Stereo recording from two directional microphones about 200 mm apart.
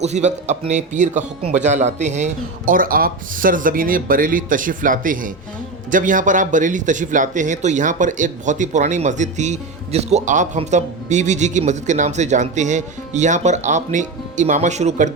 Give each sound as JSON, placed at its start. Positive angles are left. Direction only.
{"t": 0.0, "sound": "speech", "side_deg": -35}